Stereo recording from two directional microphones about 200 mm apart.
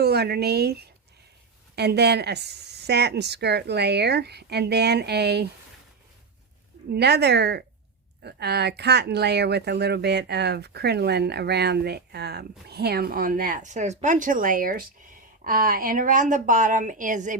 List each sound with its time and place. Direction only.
0.0 s speech: 55° right (ahead or behind)
6.9 s a woman's voice: 55° right (ahead or behind); by 17.3 s 40° right (ahead or behind)